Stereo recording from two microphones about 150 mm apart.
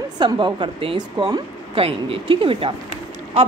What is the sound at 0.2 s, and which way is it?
A woman's voice, 30° right (ahead or behind).